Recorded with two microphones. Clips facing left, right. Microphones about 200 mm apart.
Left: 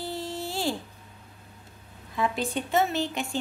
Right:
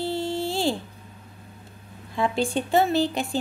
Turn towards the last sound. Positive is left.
turn(degrees=-35)  # may be behind; listen again after turning